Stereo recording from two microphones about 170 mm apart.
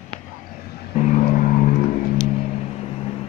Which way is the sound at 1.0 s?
45° left (ahead or behind).